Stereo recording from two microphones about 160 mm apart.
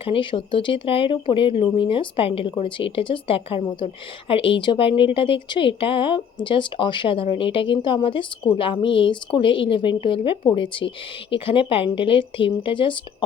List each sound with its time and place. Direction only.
0.0 s speech: 30° left (ahead or behind)